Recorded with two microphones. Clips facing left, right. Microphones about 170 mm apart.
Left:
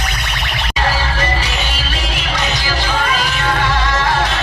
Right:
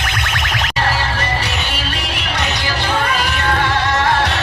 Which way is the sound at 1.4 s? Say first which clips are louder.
Even; 60° right (ahead or behind).